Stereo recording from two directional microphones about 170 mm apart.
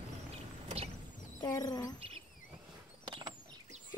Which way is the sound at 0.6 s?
35° right (ahead or behind).